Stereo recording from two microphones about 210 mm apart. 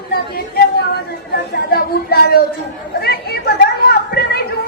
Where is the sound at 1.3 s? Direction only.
50° left (ahead or behind).